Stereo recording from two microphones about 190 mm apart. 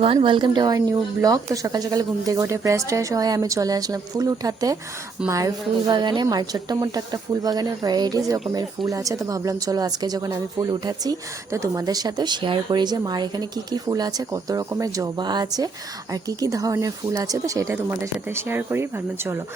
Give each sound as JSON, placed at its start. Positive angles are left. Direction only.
{"t": 0.0, "sound": "speech", "side_deg": -30}